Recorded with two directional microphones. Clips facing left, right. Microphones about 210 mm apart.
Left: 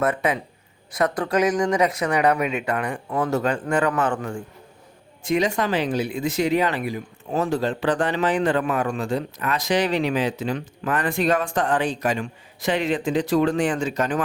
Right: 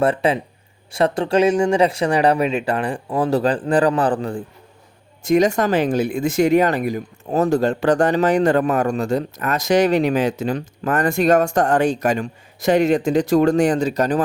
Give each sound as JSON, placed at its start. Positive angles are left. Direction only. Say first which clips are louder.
{"t": 0.0, "sound": "speech", "louder": "right 5 dB", "side_deg": -30}